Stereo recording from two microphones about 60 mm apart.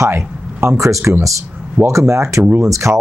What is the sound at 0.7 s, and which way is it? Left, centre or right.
Speech, right.